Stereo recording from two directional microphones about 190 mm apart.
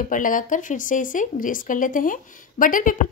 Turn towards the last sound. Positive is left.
turn(degrees=45)  # may be behind; listen again after turning